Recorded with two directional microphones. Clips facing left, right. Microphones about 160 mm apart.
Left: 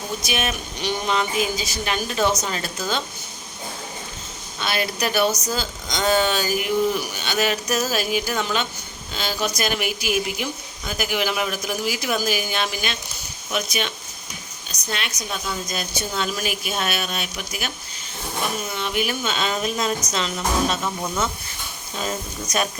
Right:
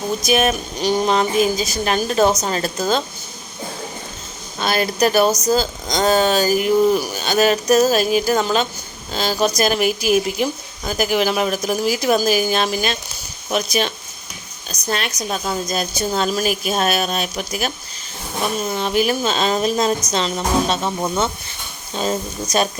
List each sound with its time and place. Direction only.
0.2 s speech: 40° right (ahead or behind)
4.6 s speech: 40° right (ahead or behind)
18.7 s speech: 35° right (ahead or behind)